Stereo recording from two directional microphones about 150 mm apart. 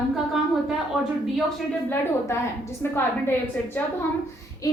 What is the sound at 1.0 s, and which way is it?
Speech, centre (ahead or behind).